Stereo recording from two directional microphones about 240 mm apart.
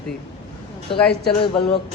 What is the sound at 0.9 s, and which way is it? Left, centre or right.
Speech, left.